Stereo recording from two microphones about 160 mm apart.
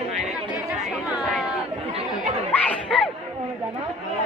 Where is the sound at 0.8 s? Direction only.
Centre (ahead or behind).